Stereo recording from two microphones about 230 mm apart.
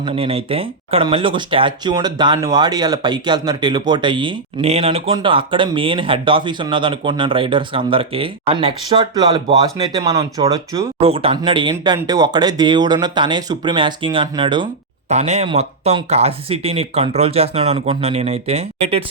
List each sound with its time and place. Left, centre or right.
0.0 s speech: right